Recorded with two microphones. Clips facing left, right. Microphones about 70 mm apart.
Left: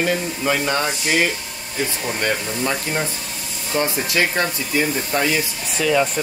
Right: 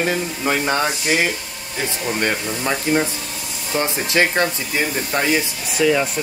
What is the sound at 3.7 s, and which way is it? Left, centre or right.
Speech, right.